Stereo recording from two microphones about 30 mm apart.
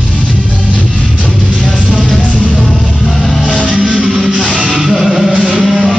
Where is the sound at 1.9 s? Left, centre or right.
Centre.